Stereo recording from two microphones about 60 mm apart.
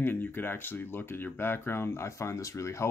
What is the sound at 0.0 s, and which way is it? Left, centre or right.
Speech, left.